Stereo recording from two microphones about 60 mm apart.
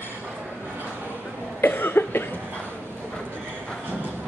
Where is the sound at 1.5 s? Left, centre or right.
Left.